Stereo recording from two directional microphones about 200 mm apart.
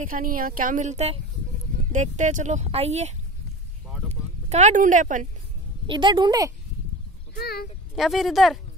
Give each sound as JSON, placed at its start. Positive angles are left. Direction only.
{"t": 0.0, "sound": "speech", "side_deg": -45}
{"t": 5.9, "sound": "a woman's voice", "side_deg": -25}
{"t": 7.3, "sound": "a child's voice", "side_deg": 50}
{"t": 7.9, "sound": "speech", "side_deg": 0}